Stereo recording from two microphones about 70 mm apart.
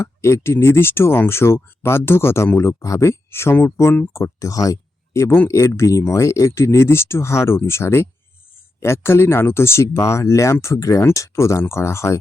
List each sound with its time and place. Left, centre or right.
0.0 s speech: left